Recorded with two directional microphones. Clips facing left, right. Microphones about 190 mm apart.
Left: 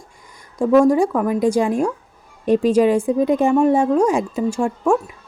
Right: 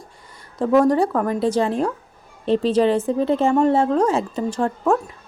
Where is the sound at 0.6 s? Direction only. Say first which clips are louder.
Left 3 dB; 10° left (ahead or behind).